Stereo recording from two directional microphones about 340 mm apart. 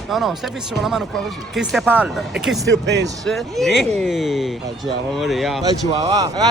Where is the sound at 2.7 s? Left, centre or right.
Right.